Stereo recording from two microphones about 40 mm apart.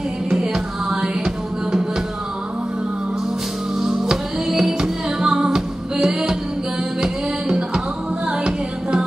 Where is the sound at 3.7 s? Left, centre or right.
Centre.